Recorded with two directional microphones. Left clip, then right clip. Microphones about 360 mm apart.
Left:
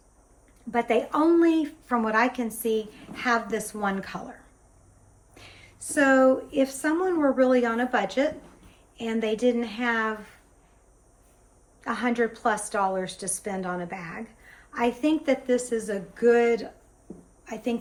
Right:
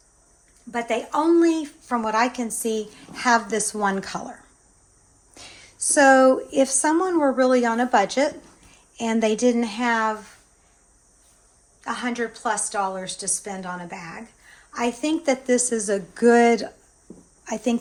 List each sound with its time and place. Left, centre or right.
0.7 s speech: centre
11.8 s a woman's voice: centre